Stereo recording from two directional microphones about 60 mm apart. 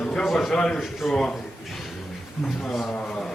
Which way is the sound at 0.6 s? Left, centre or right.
Centre.